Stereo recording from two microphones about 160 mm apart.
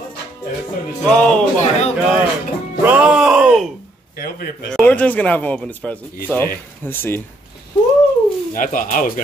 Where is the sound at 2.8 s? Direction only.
5° right (ahead or behind).